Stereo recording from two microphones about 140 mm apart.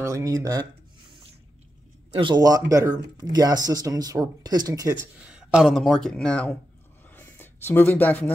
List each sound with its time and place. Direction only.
0.0 s speech: 25° right (ahead or behind)
2.0 s speech: 35° right (ahead or behind)
5.3 s speech: 5° right (ahead or behind)
7.1 s a sound: 15° left (ahead or behind)